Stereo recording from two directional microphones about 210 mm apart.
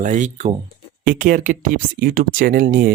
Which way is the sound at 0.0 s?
35° right (ahead or behind).